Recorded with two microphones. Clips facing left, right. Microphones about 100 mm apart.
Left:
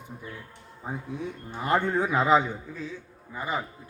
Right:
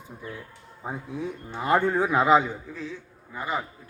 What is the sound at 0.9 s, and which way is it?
Speech, 20° right (ahead or behind).